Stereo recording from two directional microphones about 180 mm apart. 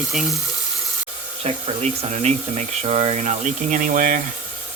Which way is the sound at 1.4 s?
35° right (ahead or behind).